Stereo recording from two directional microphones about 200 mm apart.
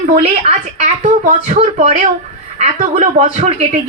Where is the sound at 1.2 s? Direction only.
40° right (ahead or behind).